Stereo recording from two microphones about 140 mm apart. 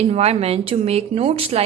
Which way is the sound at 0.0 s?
50° right (ahead or behind).